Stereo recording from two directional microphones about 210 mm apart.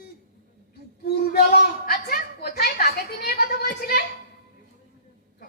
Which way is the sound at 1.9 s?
50° left (ahead or behind).